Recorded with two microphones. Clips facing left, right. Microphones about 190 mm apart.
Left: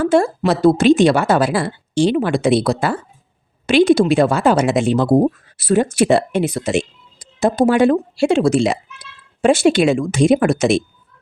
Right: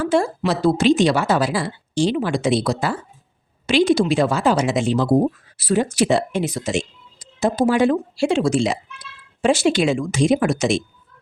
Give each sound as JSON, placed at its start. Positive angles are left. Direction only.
{"t": 0.0, "sound": "a woman's voice", "side_deg": 55}